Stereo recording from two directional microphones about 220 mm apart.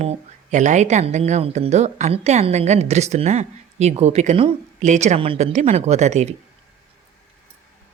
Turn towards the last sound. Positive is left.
turn(degrees=-30)  # may be behind; listen again after turning